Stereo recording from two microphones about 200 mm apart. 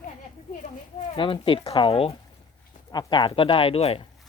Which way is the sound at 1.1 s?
25° left (ahead or behind).